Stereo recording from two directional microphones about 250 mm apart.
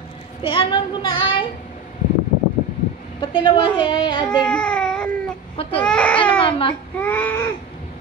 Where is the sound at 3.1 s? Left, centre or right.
Centre.